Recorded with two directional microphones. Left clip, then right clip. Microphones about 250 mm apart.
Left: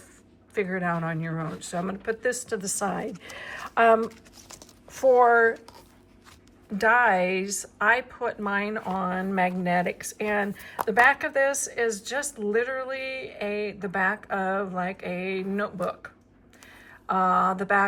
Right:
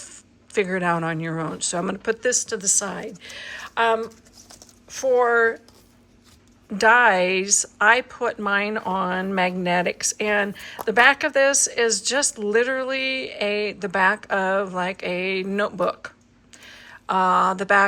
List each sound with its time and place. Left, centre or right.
0.5 s speech: centre
4.4 s a sound: left
4.9 s speech: centre
6.7 s speech: centre